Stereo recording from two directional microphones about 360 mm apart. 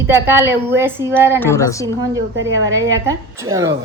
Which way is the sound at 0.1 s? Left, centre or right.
Centre.